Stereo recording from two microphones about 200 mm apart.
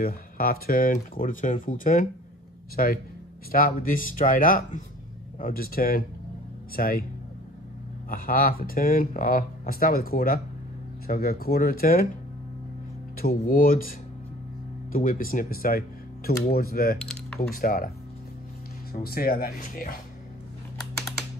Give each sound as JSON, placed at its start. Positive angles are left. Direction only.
{"t": 0.0, "sound": "speech", "side_deg": 50}
{"t": 8.1, "sound": "speech", "side_deg": 45}
{"t": 13.2, "sound": "speech", "side_deg": 50}
{"t": 17.0, "sound": "typing", "side_deg": 5}
{"t": 17.4, "sound": "speech", "side_deg": 45}